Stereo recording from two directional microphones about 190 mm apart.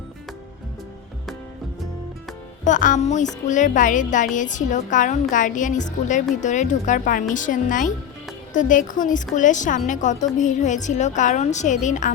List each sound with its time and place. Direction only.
2.6 s a woman's voice: 40° left (ahead or behind)